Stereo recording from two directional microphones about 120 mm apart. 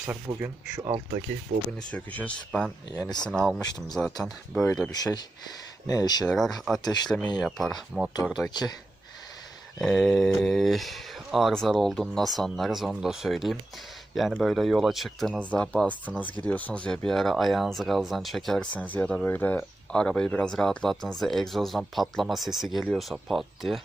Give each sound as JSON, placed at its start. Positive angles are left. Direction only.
{"t": 0.0, "sound": "speech", "side_deg": -15}
{"t": 1.9, "sound": "speech", "side_deg": 10}
{"t": 2.9, "sound": "speech", "side_deg": 35}
{"t": 3.2, "sound": "speech", "side_deg": 0}
{"t": 3.7, "sound": "speech", "side_deg": 35}
{"t": 3.9, "sound": "speech", "side_deg": 0}
{"t": 5.9, "sound": "speech", "side_deg": 30}
{"t": 6.2, "sound": "speech", "side_deg": 0}
{"t": 6.8, "sound": "speech", "side_deg": 35}
{"t": 7.4, "sound": "speech", "side_deg": 0}
{"t": 8.4, "sound": "speech", "side_deg": 35}
{"t": 9.8, "sound": "speech", "side_deg": 5}
{"t": 15.4, "sound": "speech", "side_deg": 10}